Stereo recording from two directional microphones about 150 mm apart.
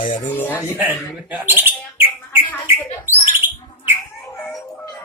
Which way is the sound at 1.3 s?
10° right (ahead or behind).